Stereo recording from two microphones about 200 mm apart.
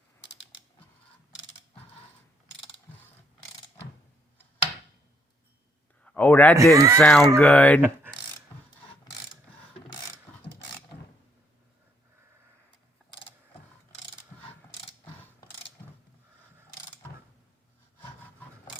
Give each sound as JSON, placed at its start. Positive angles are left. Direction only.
{"t": 6.1, "sound": "speech", "side_deg": 10}
{"t": 6.7, "sound": "speech", "side_deg": -15}
{"t": 7.0, "sound": "speech", "side_deg": 5}
{"t": 7.8, "sound": "speech", "side_deg": -10}
{"t": 10.3, "sound": "ratchet", "side_deg": 10}